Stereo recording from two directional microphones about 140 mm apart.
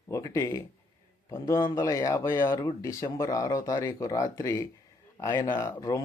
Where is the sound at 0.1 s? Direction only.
25° left (ahead or behind).